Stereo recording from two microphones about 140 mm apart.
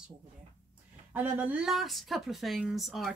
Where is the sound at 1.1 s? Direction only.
10° right (ahead or behind).